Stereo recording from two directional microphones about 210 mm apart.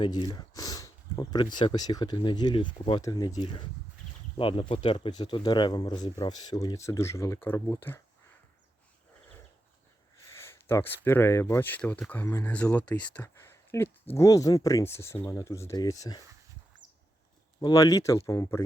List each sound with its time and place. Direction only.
0.0 s speech: 20° left (ahead or behind)
10.3 s speech: 10° left (ahead or behind)
17.6 s speech: 20° left (ahead or behind)